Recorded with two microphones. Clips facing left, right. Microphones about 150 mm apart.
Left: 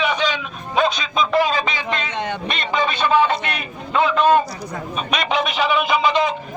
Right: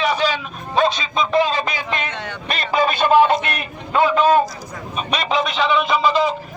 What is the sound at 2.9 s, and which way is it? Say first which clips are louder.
Speech: right 4 dB; 45° right (ahead or behind).